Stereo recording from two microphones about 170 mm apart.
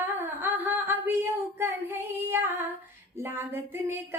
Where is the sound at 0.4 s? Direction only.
10° right (ahead or behind).